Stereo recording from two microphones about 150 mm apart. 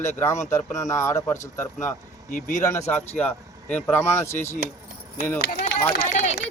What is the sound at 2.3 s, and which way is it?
Speech, 60° left (ahead or behind).